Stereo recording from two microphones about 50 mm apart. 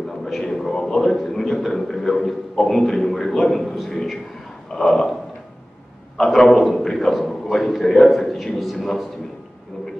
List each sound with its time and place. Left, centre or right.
0.2 s a man's voice: centre
3.9 s a sound: centre
6.1 s a man's voice: centre